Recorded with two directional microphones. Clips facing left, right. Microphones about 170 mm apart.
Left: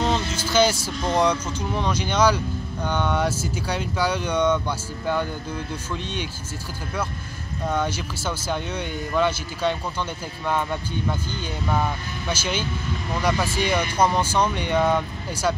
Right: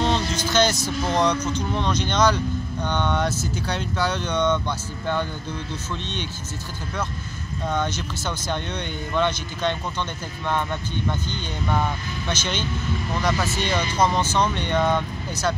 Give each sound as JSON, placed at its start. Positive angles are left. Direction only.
{"t": 0.0, "sound": "vehicle", "side_deg": 5}
{"t": 1.1, "sound": "speech", "side_deg": 10}
{"t": 7.6, "sound": "speech", "side_deg": 10}